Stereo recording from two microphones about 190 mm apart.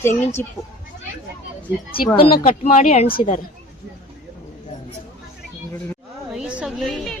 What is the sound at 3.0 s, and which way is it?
Speech, 45° left (ahead or behind).